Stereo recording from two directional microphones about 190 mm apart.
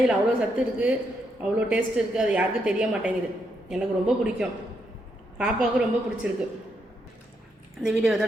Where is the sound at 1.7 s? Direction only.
5° right (ahead or behind).